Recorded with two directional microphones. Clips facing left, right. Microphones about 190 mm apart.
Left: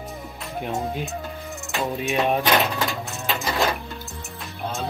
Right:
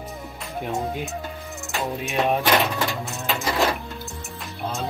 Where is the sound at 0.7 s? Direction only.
5° left (ahead or behind).